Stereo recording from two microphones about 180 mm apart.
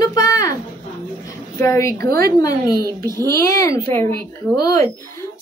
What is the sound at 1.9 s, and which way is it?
Speech, 60° right (ahead or behind).